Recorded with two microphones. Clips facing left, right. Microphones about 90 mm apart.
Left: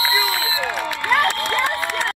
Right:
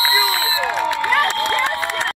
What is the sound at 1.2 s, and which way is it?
Crowd, 20° right (ahead or behind).